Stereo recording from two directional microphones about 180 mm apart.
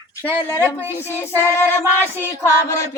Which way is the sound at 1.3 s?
15° left (ahead or behind).